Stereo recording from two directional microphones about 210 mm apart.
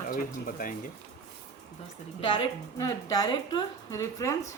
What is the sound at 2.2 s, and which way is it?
A woman's voice, 25° left (ahead or behind).